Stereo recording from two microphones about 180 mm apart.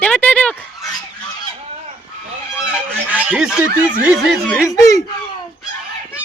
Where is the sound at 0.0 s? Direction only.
10° left (ahead or behind).